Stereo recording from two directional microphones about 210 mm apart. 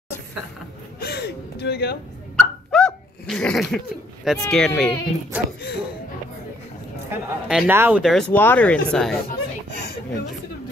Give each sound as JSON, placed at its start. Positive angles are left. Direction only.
{"t": 0.9, "sound": "gasp", "side_deg": 50}
{"t": 2.3, "sound": "a sound", "side_deg": 5}
{"t": 7.1, "sound": "speech", "side_deg": -5}